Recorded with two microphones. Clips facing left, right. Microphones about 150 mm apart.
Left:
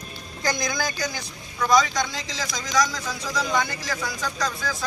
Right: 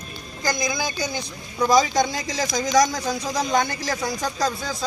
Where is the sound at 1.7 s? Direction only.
25° right (ahead or behind).